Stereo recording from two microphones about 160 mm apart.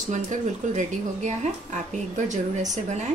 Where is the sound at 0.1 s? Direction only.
50° right (ahead or behind).